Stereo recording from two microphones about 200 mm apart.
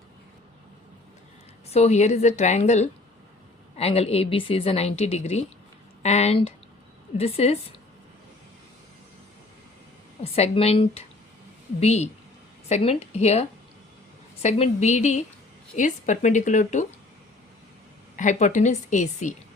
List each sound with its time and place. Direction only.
1.7 s a woman's voice: 35° left (ahead or behind)
10.3 s a woman's voice: 30° left (ahead or behind)
18.2 s a woman's voice: 35° left (ahead or behind)